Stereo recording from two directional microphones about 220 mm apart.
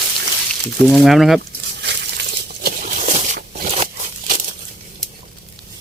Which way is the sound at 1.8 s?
50° right (ahead or behind).